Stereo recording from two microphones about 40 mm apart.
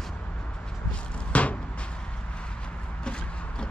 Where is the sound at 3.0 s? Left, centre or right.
Left.